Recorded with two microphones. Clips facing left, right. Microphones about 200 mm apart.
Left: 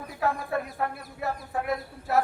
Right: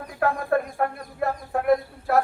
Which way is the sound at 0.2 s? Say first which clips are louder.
Right 5 dB; 55° right (ahead or behind).